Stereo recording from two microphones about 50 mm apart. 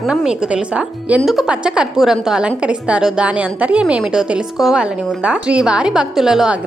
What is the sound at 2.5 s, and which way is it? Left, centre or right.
A woman's voice, right.